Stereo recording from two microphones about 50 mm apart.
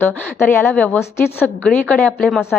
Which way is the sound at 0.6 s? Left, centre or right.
Left.